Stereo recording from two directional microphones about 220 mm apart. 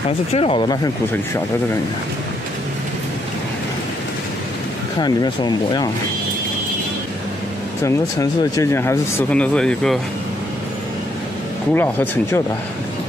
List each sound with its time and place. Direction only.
0.3 s speech: 25° left (ahead or behind)
5.0 s speech: 20° left (ahead or behind)
7.8 s speech: 15° left (ahead or behind)
11.7 s speech: 10° left (ahead or behind)